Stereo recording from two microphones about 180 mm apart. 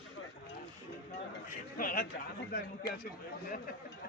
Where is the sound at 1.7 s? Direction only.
50° left (ahead or behind).